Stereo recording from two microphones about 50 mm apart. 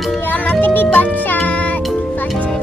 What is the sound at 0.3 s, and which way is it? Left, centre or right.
Music, left.